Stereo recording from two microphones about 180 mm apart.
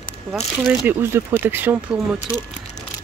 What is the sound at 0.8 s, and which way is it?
Speech, 10° right (ahead or behind).